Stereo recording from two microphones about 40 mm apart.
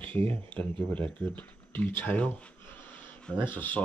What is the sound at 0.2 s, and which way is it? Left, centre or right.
Speech, left.